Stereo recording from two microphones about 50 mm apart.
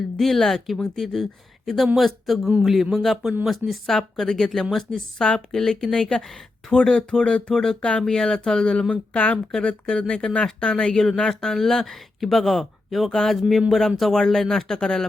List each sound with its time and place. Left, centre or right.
0.2 s a woman's voice: centre
8.9 s speech: left
9.5 s a woman's voice: centre